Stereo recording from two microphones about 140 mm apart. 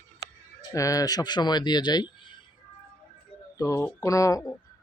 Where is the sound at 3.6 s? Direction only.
20° left (ahead or behind).